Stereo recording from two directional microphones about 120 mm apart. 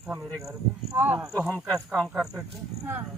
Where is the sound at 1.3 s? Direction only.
25° right (ahead or behind).